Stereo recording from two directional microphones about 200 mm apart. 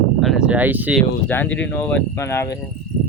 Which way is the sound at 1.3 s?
10° left (ahead or behind).